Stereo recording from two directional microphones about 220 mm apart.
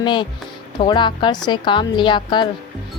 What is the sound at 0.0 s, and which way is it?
A woman's voice, 20° left (ahead or behind).